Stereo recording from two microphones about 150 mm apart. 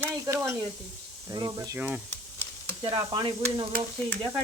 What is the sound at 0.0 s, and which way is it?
Sizzle, 15° right (ahead or behind).